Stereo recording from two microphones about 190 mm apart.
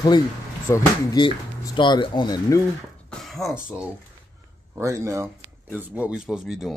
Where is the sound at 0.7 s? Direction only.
20° left (ahead or behind).